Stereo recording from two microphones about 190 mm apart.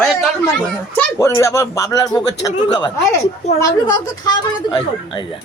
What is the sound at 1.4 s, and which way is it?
Speech, 15° left (ahead or behind).